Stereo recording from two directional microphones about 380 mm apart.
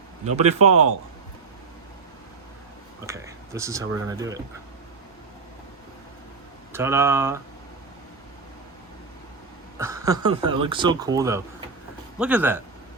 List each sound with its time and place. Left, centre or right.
0.3 s speech: centre
3.0 s speech: centre
6.7 s speech: centre
9.7 s speech: centre